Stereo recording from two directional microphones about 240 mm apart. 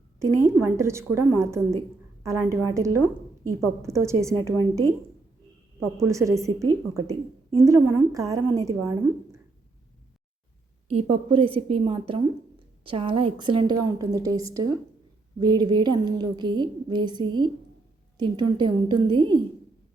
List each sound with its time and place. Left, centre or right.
0.2 s a woman's voice: centre
10.8 s a woman's voice: right